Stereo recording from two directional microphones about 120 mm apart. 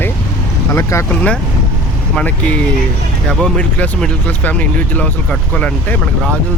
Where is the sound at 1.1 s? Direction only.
10° left (ahead or behind).